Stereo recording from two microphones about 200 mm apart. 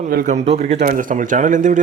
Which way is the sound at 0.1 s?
40° right (ahead or behind).